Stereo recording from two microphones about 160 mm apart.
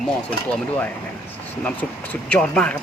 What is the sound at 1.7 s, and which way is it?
Speech, 10° left (ahead or behind).